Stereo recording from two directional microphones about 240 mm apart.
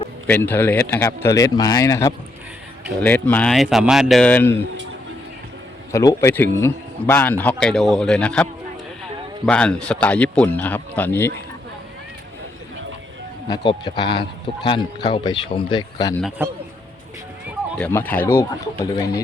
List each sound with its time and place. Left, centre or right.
0.3 s speech: centre
5.9 s speech: centre
9.5 s speech: centre
13.5 s speech: centre
16.4 s a man's voice: centre
17.7 s speech: centre